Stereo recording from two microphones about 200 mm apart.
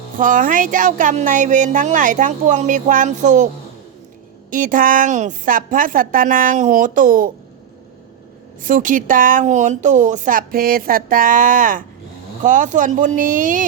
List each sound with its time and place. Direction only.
0.2 s speech: 40° right (ahead or behind)
4.5 s a woman's voice: 40° right (ahead or behind)
8.6 s speech: 40° right (ahead or behind)